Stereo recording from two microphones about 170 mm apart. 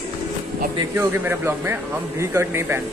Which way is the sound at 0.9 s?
15° right (ahead or behind).